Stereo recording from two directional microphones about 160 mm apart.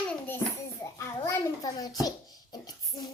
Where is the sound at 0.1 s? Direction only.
15° left (ahead or behind).